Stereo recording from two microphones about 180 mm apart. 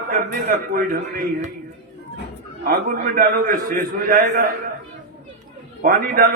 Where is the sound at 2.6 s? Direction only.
50° right (ahead or behind).